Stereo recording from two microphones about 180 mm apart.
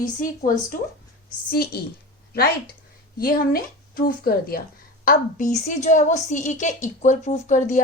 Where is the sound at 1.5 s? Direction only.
60° left (ahead or behind).